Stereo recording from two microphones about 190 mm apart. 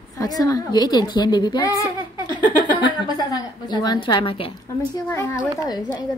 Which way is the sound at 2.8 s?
20° left (ahead or behind).